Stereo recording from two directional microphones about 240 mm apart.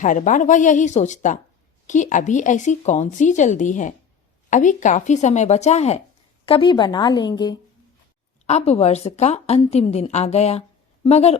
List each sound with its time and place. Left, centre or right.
0.0 s a woman's voice: left